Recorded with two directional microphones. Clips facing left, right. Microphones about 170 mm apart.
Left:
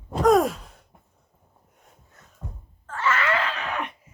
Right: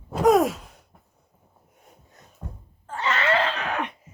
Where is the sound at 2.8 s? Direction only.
20° right (ahead or behind).